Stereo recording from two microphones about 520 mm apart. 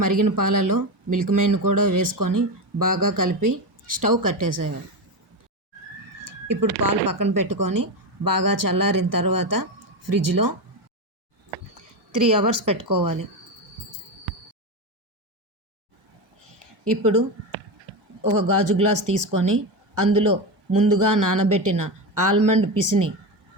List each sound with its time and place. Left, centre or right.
0.0 s speech: right
6.2 s speech: right
12.1 s speech: right
17.0 s speech: right